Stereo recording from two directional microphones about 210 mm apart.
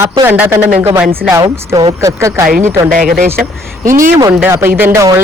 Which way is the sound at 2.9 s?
40° right (ahead or behind).